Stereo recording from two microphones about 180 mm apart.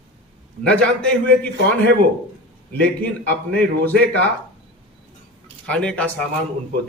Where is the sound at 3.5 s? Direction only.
5° left (ahead or behind).